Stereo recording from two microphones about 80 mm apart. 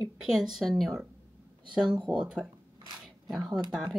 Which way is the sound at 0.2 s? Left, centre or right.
Centre.